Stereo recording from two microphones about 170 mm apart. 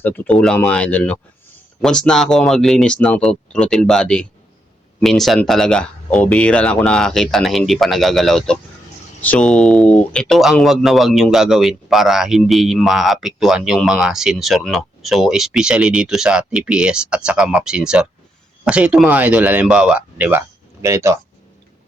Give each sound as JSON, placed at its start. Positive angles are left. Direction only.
{"t": 0.0, "sound": "speech", "side_deg": 10}